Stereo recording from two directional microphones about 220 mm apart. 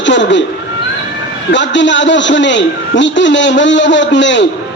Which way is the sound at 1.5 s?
55° left (ahead or behind).